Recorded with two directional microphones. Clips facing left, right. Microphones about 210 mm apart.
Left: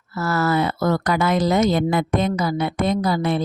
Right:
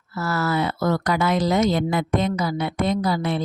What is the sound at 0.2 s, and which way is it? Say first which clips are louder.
A woman's voice: left 3 dB; 50° left (ahead or behind).